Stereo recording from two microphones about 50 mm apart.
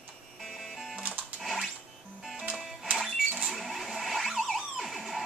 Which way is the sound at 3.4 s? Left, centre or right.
Centre.